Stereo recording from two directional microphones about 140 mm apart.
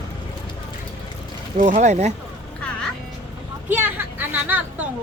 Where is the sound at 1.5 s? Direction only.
60° right (ahead or behind).